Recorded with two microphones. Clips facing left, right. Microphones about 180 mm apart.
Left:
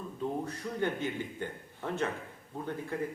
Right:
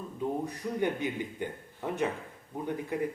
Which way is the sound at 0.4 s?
15° right (ahead or behind).